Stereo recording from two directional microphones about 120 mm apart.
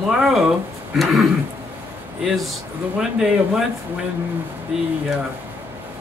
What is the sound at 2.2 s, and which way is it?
Speech, centre (ahead or behind).